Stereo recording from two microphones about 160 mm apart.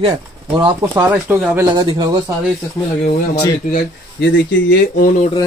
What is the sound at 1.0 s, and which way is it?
Speech, 10° right (ahead or behind).